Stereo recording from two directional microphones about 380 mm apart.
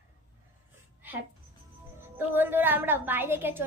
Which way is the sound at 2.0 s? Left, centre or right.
Centre.